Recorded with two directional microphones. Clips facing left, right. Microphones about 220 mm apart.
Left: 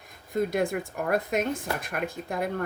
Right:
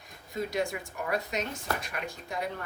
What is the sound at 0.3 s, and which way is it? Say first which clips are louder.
Speech: left 6 dB; 55° left (ahead or behind).